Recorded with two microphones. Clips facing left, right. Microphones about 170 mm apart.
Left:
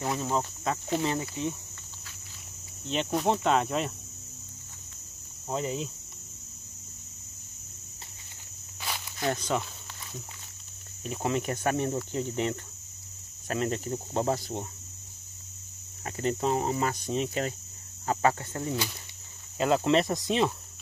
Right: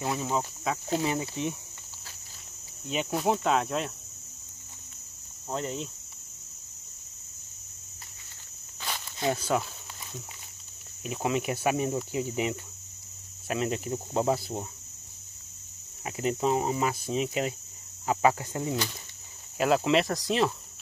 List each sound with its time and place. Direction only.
0.0 s cricket: 5° right (ahead or behind)
1.2 s speech: 15° right (ahead or behind)
2.9 s cricket: 5° right (ahead or behind)
5.5 s cricket: 5° left (ahead or behind)
9.3 s speech: 5° right (ahead or behind)
11.1 s speech: 5° right (ahead or behind)
13.5 s cricket: 5° right (ahead or behind)
16.1 s speech: 10° right (ahead or behind)
19.6 s cricket: 5° right (ahead or behind)